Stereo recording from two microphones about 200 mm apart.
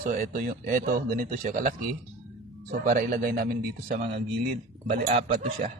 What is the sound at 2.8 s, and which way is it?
A man's voice, 45° right (ahead or behind).